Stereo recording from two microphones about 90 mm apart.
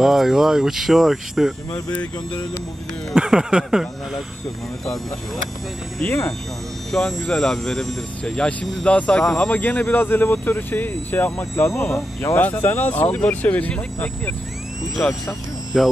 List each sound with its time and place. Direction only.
0.0 s speech: 5° right (ahead or behind)
3.2 s speech: 10° right (ahead or behind)
6.9 s speech: 5° left (ahead or behind); by 12.4 s 30° left (ahead or behind)
12.4 s speech: 20° left (ahead or behind)
15.7 s speech: 5° right (ahead or behind)